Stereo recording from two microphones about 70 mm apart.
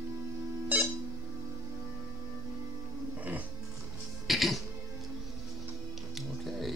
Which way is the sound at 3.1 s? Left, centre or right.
Right.